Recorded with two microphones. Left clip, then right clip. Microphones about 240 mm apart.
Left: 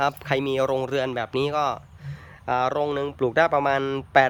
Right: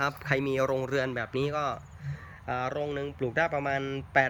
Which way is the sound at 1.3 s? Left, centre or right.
Centre.